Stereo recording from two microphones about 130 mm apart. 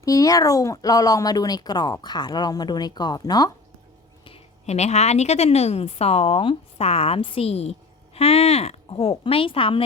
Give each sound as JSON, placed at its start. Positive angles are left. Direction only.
{"t": 0.0, "sound": "speech", "side_deg": 25}
{"t": 4.6, "sound": "speech", "side_deg": 55}